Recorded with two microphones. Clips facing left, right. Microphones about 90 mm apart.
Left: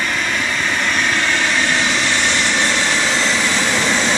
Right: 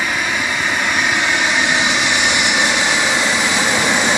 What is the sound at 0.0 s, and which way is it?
Vehicle, 10° right (ahead or behind).